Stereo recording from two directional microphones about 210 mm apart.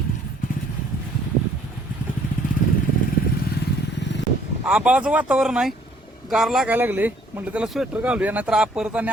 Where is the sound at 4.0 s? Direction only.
55° left (ahead or behind).